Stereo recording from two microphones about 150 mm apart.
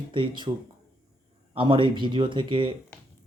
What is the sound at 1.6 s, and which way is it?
Speech, 35° right (ahead or behind).